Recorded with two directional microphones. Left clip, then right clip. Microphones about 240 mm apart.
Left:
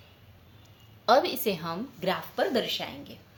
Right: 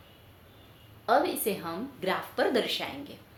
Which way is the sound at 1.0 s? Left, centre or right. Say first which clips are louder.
Left 3 dB; left.